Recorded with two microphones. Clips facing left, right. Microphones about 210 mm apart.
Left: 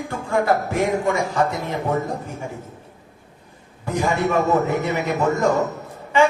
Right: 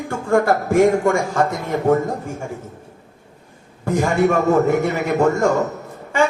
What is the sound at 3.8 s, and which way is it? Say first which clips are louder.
A man's voice: right 4 dB; 45° right (ahead or behind).